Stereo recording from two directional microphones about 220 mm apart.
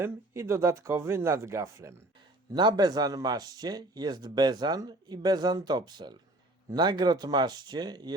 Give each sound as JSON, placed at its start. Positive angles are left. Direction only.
{"t": 0.0, "sound": "speech", "side_deg": -10}